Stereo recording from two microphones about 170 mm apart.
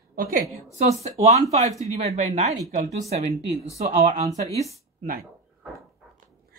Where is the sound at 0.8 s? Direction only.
40° right (ahead or behind).